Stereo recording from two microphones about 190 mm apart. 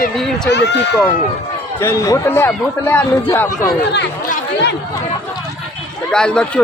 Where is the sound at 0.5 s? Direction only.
65° left (ahead or behind).